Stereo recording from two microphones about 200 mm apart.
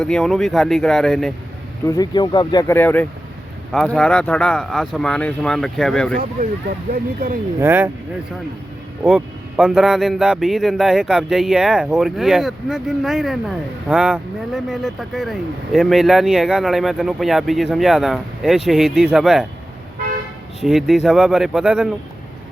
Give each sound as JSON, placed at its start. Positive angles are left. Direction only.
{"t": 0.0, "sound": "speech", "side_deg": 5}
{"t": 1.8, "sound": "speech", "side_deg": 15}
{"t": 7.6, "sound": "speech", "side_deg": -10}
{"t": 9.0, "sound": "speech", "side_deg": -5}
{"t": 20.6, "sound": "speech", "side_deg": 0}